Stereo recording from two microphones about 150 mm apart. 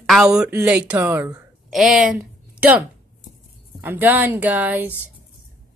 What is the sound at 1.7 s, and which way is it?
Speech, 5° right (ahead or behind).